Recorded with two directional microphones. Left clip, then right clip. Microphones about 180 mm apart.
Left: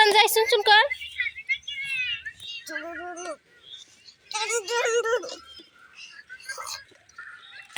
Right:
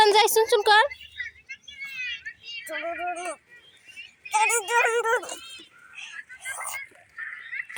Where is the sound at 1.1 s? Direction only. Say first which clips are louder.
Left 9 dB; 60° right (ahead or behind); by 3.3 s 45° right (ahead or behind).